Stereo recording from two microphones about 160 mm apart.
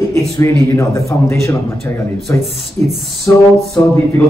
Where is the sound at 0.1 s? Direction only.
20° left (ahead or behind).